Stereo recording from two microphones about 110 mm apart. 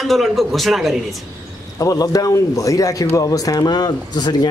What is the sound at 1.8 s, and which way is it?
Speech, 35° left (ahead or behind).